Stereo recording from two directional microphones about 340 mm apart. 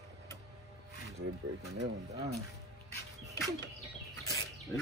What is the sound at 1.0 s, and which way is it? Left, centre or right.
Speech, right.